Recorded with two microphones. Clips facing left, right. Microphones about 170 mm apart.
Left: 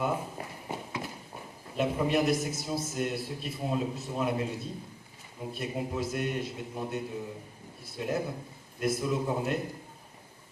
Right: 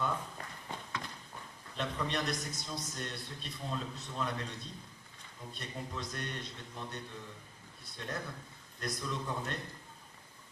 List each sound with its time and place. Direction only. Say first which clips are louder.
0.0 s walk: left 6 dB; 20° left (ahead or behind)
2.4 s a man's voice: left 9 dB; 5° left (ahead or behind)
8.1 s a man's voice: left 9 dB; 20° left (ahead or behind)
8.8 s a man's voice: left 10 dB; 5° left (ahead or behind)
9.2 s a man's voice: left 8 dB; 20° left (ahead or behind)